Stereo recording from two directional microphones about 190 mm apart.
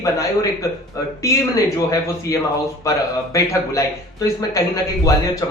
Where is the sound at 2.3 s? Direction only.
20° left (ahead or behind).